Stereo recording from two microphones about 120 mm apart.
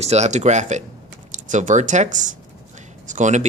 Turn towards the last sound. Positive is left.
turn(degrees=-85)